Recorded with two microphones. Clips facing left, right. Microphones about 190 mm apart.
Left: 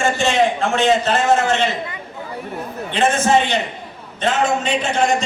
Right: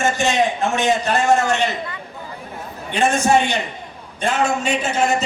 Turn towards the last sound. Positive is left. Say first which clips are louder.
# left 1 dB
turn(degrees=-5)  # may be behind; listen again after turning